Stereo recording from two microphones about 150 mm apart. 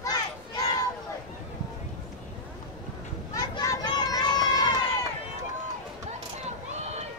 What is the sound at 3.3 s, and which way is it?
Children playing, 25° left (ahead or behind).